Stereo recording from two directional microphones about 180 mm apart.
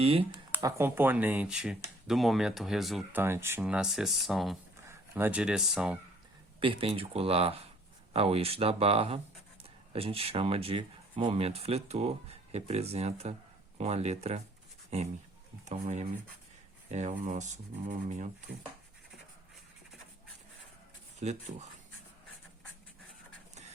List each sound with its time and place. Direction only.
0.0 s speech: 30° right (ahead or behind)
0.5 s speech: 10° right (ahead or behind)
3.2 s speech: 15° right (ahead or behind)
4.9 s speech: 10° right (ahead or behind)
6.6 s speech: 30° right (ahead or behind)
21.2 s speech: 40° right (ahead or behind)